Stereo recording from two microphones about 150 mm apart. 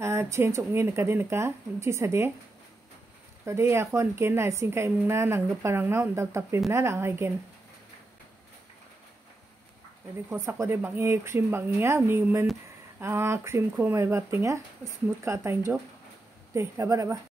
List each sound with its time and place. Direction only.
0.0 s a woman's voice: 15° right (ahead or behind)
3.4 s a woman's voice: 15° right (ahead or behind)
10.3 s a woman's voice: 15° right (ahead or behind)